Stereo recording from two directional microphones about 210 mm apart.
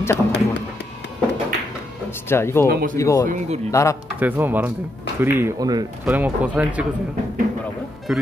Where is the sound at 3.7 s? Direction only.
15° left (ahead or behind).